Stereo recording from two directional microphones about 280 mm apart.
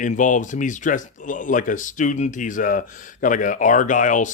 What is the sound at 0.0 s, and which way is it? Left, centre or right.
Speech, left.